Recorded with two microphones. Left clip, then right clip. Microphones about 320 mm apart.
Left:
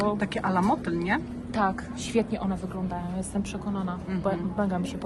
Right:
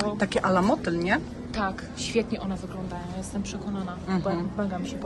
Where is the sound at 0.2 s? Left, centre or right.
Centre.